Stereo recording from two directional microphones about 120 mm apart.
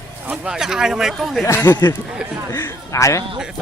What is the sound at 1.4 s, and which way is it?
A man's voice, 20° left (ahead or behind).